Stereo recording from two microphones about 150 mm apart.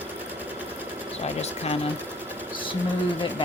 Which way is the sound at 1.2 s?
45° left (ahead or behind).